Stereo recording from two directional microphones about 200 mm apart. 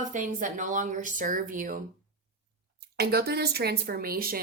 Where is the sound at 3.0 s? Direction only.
55° right (ahead or behind).